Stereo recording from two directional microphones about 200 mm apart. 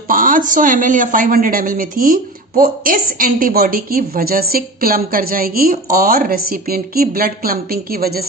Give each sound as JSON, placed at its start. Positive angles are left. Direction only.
{"t": 0.1, "sound": "a woman's voice", "side_deg": -45}